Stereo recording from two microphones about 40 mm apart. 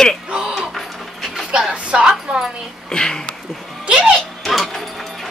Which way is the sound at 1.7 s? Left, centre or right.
Right.